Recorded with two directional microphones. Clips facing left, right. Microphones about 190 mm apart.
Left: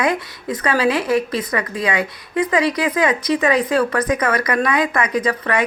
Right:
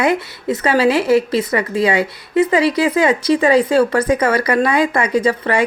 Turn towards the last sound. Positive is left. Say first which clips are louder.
# right 4 dB
turn(degrees=-30)  # may be behind; listen again after turning